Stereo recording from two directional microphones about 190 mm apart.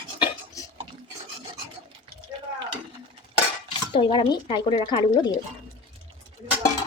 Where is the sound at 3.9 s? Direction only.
25° left (ahead or behind).